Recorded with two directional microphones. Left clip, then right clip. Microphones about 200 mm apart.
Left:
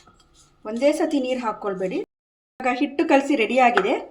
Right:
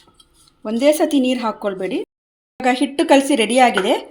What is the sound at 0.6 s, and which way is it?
A woman's voice, 40° right (ahead or behind).